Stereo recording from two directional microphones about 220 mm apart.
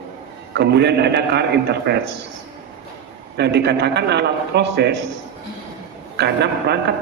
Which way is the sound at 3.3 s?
50° right (ahead or behind).